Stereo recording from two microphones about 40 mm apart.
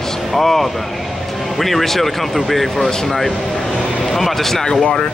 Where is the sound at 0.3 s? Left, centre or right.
Centre.